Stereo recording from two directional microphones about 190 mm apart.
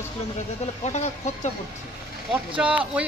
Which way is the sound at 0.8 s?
35° left (ahead or behind).